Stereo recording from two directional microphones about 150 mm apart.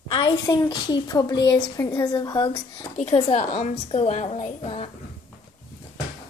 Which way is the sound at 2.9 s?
40° left (ahead or behind).